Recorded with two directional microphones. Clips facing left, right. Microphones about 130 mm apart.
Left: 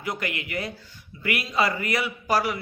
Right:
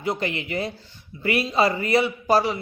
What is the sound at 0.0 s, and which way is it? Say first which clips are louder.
Speech: right 5 dB; 25° right (ahead or behind).